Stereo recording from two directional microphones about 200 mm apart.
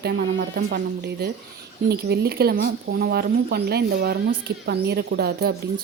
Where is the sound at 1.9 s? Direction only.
50° right (ahead or behind).